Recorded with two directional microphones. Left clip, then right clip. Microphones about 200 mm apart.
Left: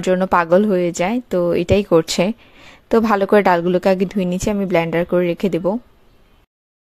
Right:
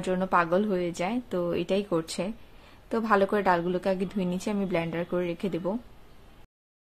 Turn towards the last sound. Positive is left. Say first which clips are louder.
# left 12 dB
turn(degrees=40)  # may be behind; listen again after turning